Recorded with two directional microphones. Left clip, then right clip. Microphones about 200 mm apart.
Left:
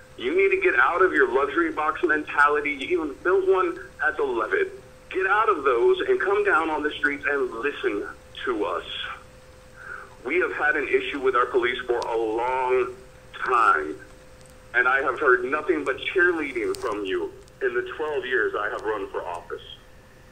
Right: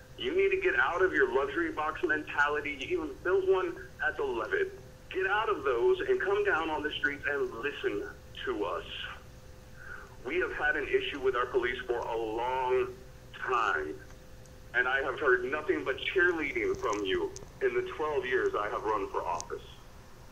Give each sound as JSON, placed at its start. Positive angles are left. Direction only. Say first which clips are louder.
{"t": 0.2, "sound": "a man's voice", "louder": "left 7 dB", "side_deg": 20}
{"t": 10.2, "sound": "a man's voice", "louder": "left 8 dB", "side_deg": 20}